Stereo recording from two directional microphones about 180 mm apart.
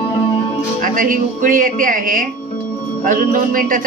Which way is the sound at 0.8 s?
50° right (ahead or behind).